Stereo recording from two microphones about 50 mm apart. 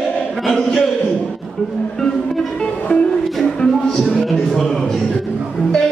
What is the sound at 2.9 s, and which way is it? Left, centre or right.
Music, left.